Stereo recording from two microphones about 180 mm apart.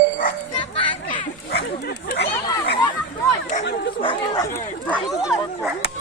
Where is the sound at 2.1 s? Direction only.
65° left (ahead or behind).